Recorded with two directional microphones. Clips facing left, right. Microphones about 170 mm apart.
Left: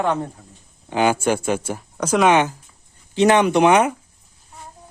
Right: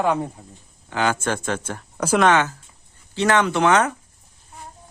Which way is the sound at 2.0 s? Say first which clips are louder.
Even; 5° right (ahead or behind).